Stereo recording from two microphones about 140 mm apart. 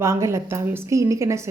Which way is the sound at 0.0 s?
20° right (ahead or behind).